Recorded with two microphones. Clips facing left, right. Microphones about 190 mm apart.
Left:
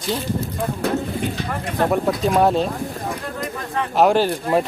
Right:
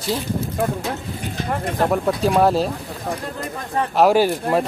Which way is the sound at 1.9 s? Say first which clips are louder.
Even; centre (ahead or behind).